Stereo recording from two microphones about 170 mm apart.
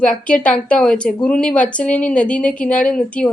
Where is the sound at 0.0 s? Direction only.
5° left (ahead or behind).